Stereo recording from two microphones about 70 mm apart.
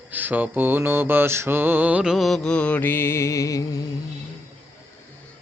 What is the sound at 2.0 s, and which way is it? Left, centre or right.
Music, centre.